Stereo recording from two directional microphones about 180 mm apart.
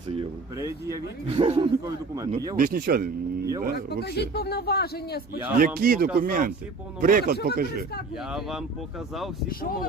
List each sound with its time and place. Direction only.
0.5 s speech: 20° right (ahead or behind)
1.3 s a man's voice: 35° right (ahead or behind)
2.6 s speech: 50° right (ahead or behind)
4.0 s a man's voice: 65° left (ahead or behind)
5.5 s speech: 55° right (ahead or behind)
8.3 s speech: centre (ahead or behind)
9.5 s speech: 55° left (ahead or behind)